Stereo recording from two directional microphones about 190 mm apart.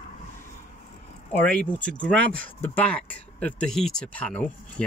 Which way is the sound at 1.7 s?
5° left (ahead or behind).